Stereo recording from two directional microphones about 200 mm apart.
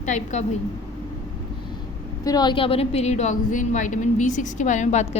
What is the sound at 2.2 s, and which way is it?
A woman's voice, 20° left (ahead or behind).